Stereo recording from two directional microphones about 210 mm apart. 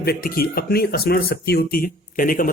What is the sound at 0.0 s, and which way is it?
Speech, 45° left (ahead or behind).